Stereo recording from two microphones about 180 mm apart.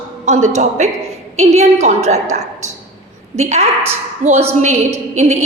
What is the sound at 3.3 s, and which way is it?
A woman's voice, 35° right (ahead or behind).